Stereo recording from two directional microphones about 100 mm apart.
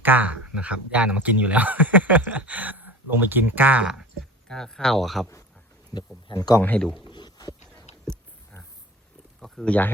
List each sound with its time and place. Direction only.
0.0 s speech: 15° right (ahead or behind)
4.4 s speech: 5° left (ahead or behind)
5.9 s a man's voice: 35° left (ahead or behind)
6.6 s speech: 15° left (ahead or behind)
7.0 s a sound: 50° left (ahead or behind)
9.4 s a sound: 5° left (ahead or behind)